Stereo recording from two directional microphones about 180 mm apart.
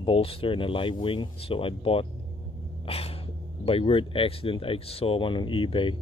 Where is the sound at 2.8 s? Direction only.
30° left (ahead or behind).